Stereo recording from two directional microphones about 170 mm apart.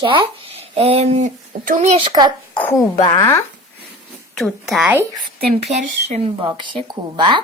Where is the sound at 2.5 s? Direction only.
10° left (ahead or behind).